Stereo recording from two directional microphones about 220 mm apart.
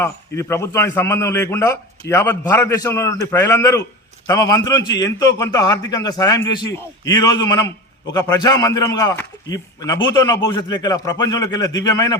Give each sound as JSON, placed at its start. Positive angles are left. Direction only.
{"t": 0.0, "sound": "a man's voice", "side_deg": 15}